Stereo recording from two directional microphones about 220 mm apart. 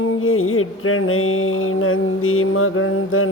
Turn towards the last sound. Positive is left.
turn(degrees=65)  # may be behind; listen again after turning